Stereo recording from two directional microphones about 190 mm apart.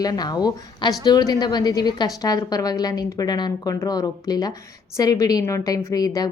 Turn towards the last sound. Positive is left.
turn(degrees=20)  # may be behind; listen again after turning